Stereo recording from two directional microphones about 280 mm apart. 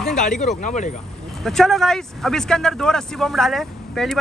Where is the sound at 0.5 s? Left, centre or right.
Left.